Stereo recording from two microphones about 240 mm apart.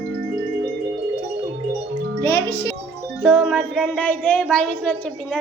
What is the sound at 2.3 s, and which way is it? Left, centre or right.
Speech, left.